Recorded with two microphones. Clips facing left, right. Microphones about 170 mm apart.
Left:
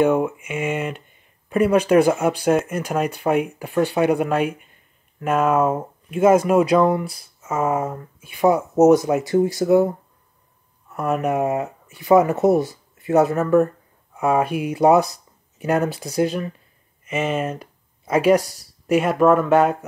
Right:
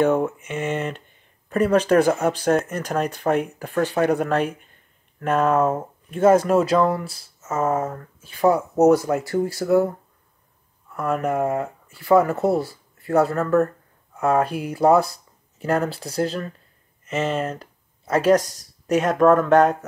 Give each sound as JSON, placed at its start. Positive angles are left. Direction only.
{"t": 0.0, "sound": "speech", "side_deg": 10}